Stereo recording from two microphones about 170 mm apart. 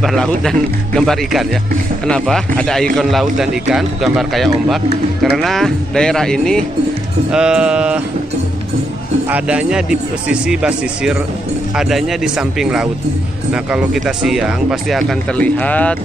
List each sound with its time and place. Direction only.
0.0 s speech: centre (ahead or behind)
9.3 s speech: 5° right (ahead or behind); by 16.0 s 10° left (ahead or behind)